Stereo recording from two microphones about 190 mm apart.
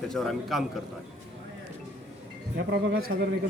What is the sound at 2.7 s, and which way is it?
Speech, 55° right (ahead or behind).